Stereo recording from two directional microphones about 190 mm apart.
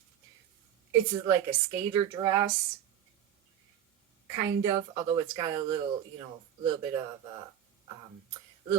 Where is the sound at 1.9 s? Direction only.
20° right (ahead or behind).